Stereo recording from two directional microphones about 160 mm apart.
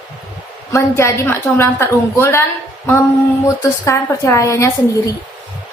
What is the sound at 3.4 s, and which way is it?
A woman's voice, 20° left (ahead or behind).